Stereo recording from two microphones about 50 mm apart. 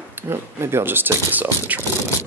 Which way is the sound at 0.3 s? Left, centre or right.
Right.